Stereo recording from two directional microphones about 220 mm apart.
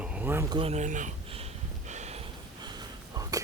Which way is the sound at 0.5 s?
25° right (ahead or behind).